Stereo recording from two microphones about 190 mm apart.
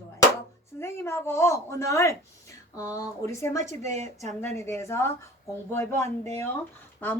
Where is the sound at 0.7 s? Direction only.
15° left (ahead or behind).